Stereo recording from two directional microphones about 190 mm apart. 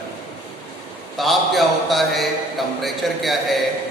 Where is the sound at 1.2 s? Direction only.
Centre (ahead or behind).